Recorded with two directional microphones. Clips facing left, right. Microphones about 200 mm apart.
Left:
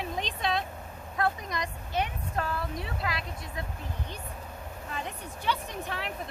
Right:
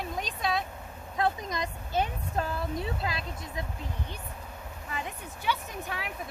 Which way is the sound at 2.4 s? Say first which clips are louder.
Right 1 dB; 25° right (ahead or behind).